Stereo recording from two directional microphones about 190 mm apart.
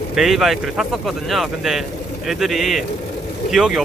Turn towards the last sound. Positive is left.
turn(degrees=0)  # may be behind; listen again after turning